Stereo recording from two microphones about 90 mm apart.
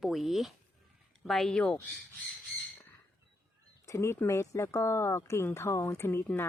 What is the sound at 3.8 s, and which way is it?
Speech, 35° left (ahead or behind).